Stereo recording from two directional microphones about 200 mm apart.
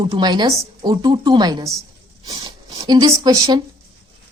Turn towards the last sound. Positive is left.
turn(degrees=-20)  # may be behind; listen again after turning